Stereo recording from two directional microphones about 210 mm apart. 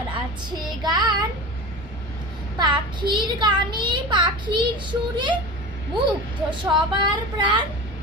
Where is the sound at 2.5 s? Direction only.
20° right (ahead or behind).